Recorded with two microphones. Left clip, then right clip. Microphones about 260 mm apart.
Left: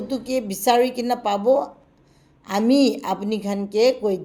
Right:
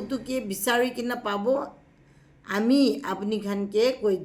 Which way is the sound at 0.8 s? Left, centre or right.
Centre.